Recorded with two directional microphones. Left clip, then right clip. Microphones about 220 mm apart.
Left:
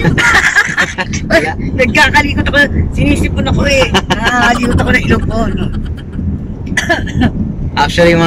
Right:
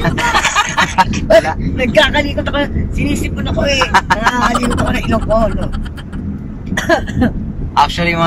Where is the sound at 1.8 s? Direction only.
40° left (ahead or behind).